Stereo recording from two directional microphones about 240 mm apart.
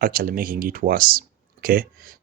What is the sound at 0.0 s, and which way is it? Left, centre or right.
Speech, right.